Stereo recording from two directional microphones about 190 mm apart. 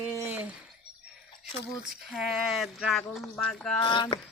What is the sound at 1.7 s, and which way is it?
Speech, centre (ahead or behind).